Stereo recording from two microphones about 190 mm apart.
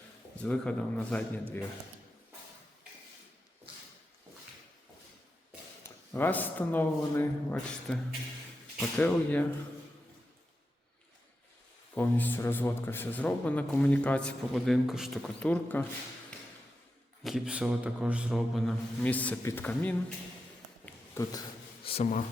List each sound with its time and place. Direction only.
0.3 s a man's voice: 5° left (ahead or behind)
6.1 s a man's voice: 10° left (ahead or behind)
9.0 s a man's voice: 10° left (ahead or behind)
11.9 s a man's voice: 10° left (ahead or behind)
17.2 s a man's voice: 5° right (ahead or behind)
20.8 s a sound: 15° left (ahead or behind)
21.8 s speech: 35° left (ahead or behind)